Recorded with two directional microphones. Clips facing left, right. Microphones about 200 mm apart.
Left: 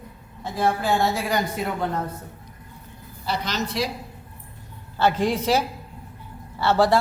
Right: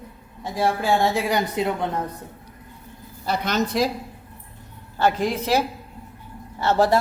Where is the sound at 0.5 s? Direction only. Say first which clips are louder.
Right 1 dB; 15° right (ahead or behind).